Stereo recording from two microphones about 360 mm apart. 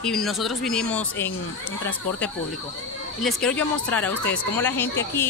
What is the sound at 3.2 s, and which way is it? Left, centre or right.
Speech, centre.